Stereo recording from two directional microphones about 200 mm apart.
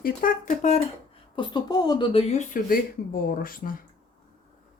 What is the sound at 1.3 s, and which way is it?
Speech, 25° left (ahead or behind).